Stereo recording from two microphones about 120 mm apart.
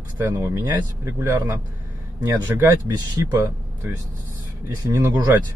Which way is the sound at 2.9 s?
30° right (ahead or behind).